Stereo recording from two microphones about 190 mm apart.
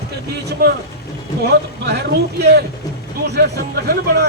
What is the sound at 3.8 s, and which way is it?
Speech, 55° right (ahead or behind).